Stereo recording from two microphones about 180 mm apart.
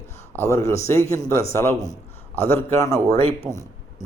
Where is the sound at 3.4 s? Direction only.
Centre (ahead or behind).